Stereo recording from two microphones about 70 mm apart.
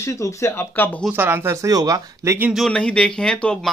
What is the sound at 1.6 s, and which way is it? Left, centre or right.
Speech, right.